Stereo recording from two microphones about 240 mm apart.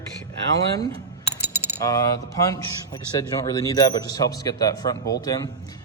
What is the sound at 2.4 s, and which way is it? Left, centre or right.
Speech, centre.